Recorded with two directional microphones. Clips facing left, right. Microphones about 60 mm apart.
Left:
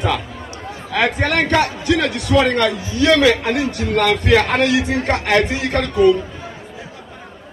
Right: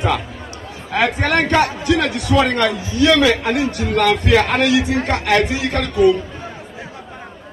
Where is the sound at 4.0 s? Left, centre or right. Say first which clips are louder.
Even; left.